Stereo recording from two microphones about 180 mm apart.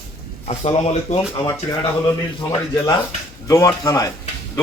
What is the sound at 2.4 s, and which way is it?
A man's voice, 15° left (ahead or behind).